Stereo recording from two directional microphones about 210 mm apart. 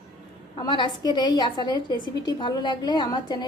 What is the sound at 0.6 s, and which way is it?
A woman's voice, 20° left (ahead or behind).